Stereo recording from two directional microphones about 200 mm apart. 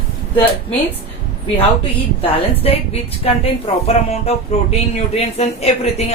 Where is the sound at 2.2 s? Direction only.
30° left (ahead or behind).